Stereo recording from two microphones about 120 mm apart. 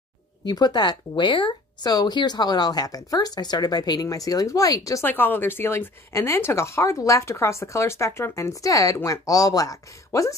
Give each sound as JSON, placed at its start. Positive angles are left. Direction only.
{"t": 0.5, "sound": "speech", "side_deg": 35}
{"t": 5.0, "sound": "speech", "side_deg": 15}